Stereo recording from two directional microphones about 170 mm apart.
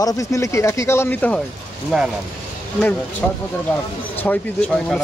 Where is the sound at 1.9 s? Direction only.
Centre (ahead or behind).